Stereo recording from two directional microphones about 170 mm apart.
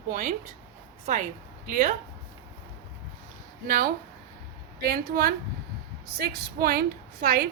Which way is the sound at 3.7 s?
60° right (ahead or behind).